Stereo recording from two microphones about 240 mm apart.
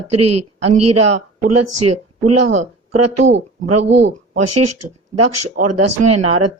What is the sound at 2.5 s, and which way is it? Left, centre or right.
Speech, right.